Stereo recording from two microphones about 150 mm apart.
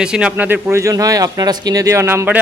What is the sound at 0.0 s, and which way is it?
Speech, 5° right (ahead or behind).